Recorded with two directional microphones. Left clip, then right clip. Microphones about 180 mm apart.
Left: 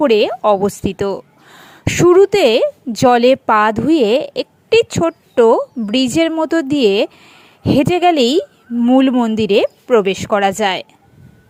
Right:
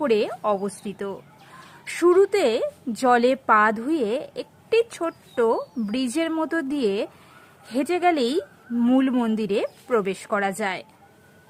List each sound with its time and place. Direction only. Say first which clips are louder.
0.0 s a woman's voice: left 10 dB; 30° left (ahead or behind)